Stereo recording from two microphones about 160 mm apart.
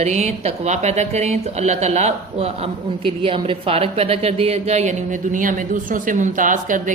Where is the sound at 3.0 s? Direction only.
35° right (ahead or behind).